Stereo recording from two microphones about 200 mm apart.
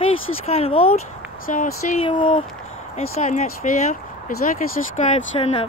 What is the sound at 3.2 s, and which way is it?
Speech, 35° left (ahead or behind).